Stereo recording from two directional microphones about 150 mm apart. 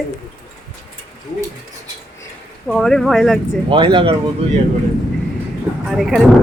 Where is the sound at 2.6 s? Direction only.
5° left (ahead or behind).